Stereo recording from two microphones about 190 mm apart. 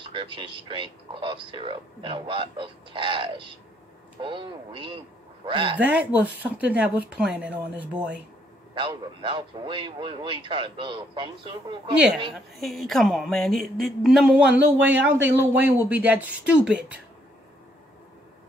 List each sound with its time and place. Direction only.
0.1 s a man's voice: 25° right (ahead or behind)
5.8 s speech: 10° right (ahead or behind)
8.7 s a man's voice: 25° right (ahead or behind)
12.5 s speech: centre (ahead or behind)